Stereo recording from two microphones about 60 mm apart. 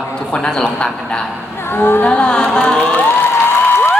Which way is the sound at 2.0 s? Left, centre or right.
Centre.